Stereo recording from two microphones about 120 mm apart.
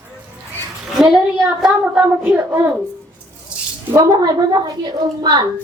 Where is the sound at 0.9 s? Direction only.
5° right (ahead or behind).